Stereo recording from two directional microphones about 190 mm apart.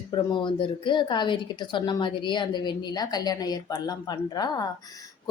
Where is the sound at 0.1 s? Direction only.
25° left (ahead or behind).